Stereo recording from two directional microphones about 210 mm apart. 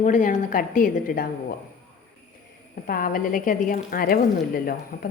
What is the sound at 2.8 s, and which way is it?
A woman's voice, 45° left (ahead or behind).